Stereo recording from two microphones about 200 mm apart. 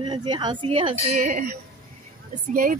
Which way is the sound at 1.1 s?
40° right (ahead or behind).